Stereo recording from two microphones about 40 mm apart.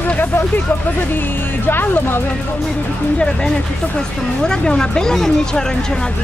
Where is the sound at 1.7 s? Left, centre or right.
Left.